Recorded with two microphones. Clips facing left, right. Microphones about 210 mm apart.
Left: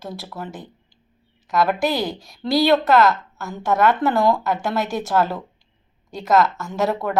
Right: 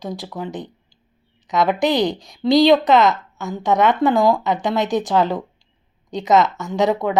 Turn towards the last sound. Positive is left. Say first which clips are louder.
# right 4 dB
turn(degrees=-15)  # may be behind; listen again after turning